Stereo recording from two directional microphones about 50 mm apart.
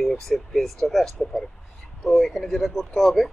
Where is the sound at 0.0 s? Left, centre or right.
Centre.